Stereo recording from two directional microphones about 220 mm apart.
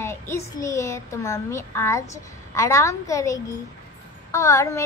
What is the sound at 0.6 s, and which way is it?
A woman's voice, 15° left (ahead or behind).